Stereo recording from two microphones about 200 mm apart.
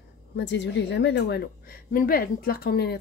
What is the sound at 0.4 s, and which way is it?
A woman's voice, 60° left (ahead or behind).